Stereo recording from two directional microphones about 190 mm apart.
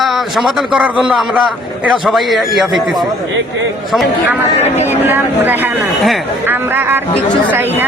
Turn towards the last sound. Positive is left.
turn(degrees=-10)  # may be behind; listen again after turning